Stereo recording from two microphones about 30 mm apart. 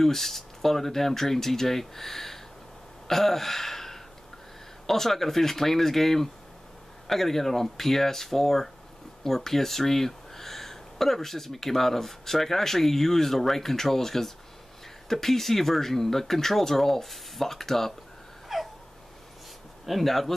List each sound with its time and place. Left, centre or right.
0.0 s speech: centre
3.1 s gasp: centre
4.8 s speech: centre
18.5 s a sound: centre
19.9 s speech: centre